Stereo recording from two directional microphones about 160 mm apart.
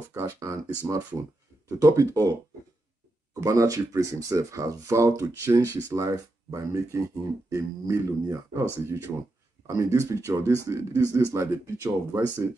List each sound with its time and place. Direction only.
0.1 s speech: 15° right (ahead or behind)
3.3 s speech: 20° right (ahead or behind)